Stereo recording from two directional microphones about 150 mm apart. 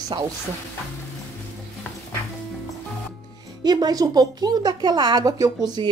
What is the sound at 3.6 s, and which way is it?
Speech, 25° right (ahead or behind).